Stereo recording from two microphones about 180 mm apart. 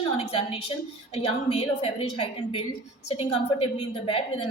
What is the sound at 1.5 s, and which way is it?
A woman's voice, 35° left (ahead or behind).